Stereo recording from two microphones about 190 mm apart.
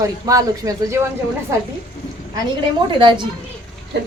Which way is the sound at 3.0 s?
25° right (ahead or behind).